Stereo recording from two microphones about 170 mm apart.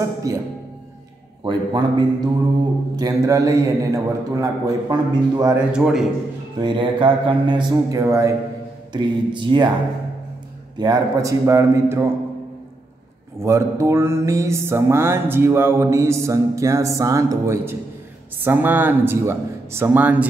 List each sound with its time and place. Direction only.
0.3 s a man's voice: 20° right (ahead or behind)
5.6 s a man's voice: 5° right (ahead or behind)
6.6 s a man's voice: 30° right (ahead or behind)
10.8 s a man's voice: 20° right (ahead or behind)
13.4 s music: 15° right (ahead or behind)